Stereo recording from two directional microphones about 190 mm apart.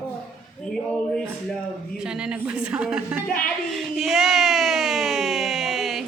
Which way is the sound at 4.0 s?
Centre (ahead or behind).